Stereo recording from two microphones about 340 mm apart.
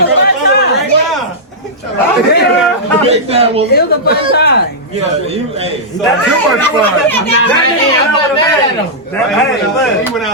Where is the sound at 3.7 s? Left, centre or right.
Left.